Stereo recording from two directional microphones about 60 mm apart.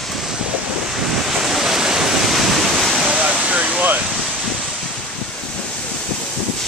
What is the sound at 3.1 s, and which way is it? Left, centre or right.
Vehicle, right.